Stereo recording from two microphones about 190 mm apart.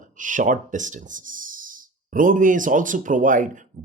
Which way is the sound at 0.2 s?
45° right (ahead or behind).